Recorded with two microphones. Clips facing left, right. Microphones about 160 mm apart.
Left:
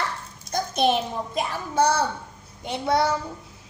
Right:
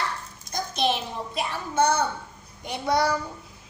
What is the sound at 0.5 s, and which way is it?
A child's voice, 50° left (ahead or behind).